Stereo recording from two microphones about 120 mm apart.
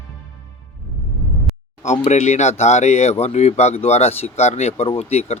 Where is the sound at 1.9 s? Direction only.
70° left (ahead or behind).